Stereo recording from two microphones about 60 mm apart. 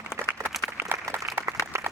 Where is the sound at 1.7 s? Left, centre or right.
Right.